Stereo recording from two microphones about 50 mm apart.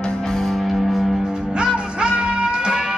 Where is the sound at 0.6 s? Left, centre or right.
Centre.